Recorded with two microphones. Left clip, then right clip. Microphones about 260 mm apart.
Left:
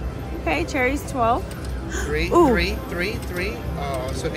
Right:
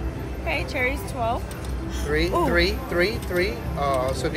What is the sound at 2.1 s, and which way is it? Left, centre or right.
Speech, centre.